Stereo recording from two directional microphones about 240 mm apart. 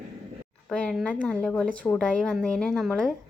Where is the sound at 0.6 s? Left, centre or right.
Centre.